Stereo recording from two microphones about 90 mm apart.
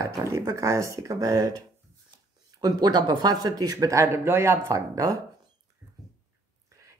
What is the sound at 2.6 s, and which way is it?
Speech, 50° right (ahead or behind).